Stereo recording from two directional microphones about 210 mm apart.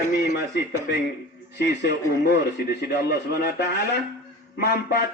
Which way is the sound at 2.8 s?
50° left (ahead or behind).